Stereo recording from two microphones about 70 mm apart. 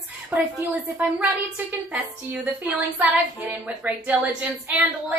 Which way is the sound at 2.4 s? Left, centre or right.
Right.